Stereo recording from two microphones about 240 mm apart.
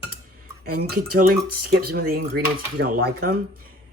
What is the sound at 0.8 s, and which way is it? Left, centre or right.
Speech, right.